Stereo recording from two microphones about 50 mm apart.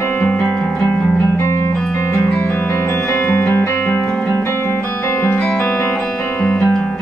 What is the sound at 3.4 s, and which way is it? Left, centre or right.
Music, left.